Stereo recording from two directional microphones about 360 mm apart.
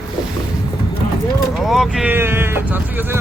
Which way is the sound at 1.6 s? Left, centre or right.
Centre.